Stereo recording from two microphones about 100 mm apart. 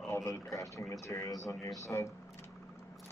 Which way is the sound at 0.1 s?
30° left (ahead or behind).